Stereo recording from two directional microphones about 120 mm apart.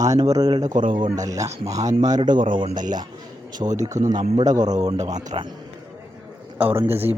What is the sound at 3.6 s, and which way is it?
Speech, 40° right (ahead or behind).